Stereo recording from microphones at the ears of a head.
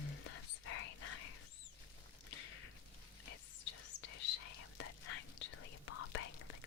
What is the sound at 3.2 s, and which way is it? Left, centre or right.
Whispering, left.